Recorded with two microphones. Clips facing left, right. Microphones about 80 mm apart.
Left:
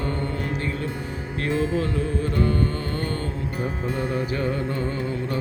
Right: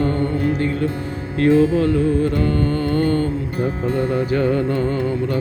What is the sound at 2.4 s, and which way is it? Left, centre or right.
Music, left.